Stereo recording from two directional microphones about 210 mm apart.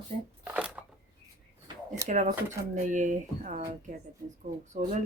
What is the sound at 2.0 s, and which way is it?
Speech, 35° right (ahead or behind).